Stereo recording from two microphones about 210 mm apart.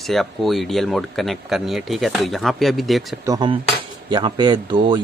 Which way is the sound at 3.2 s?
20° right (ahead or behind).